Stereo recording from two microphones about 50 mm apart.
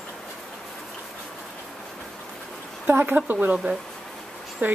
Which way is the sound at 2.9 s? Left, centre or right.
Right.